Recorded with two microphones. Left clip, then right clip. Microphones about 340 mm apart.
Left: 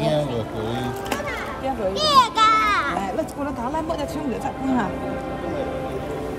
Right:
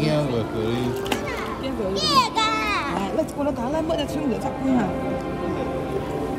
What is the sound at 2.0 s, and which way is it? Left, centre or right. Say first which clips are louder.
Children playing: left 4 dB; centre.